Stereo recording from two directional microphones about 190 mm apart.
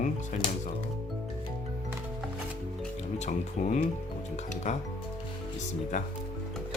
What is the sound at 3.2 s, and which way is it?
Speech, 40° left (ahead or behind).